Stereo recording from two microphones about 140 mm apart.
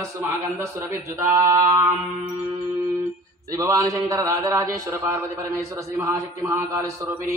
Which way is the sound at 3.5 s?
25° right (ahead or behind).